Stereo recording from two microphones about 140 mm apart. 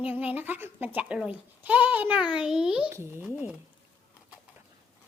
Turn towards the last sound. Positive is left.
turn(degrees=-10)  # may be behind; listen again after turning